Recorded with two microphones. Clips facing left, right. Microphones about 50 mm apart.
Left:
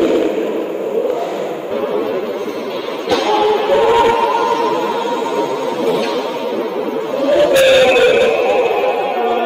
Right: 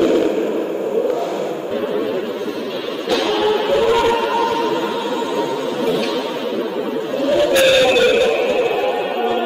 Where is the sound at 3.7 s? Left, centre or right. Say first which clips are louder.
Left 5 dB; left.